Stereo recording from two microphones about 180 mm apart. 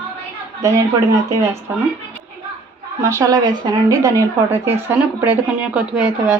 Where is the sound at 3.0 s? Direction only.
15° right (ahead or behind).